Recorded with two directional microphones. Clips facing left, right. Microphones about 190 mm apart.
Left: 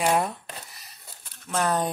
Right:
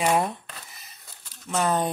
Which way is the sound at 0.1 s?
Centre (ahead or behind).